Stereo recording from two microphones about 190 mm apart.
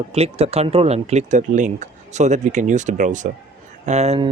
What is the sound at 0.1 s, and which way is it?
Speech, 30° right (ahead or behind).